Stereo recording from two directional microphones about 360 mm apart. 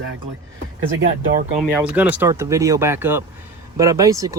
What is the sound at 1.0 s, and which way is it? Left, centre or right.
Speech, right.